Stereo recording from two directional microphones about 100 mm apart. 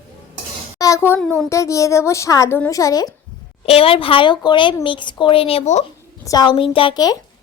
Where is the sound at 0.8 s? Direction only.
30° left (ahead or behind).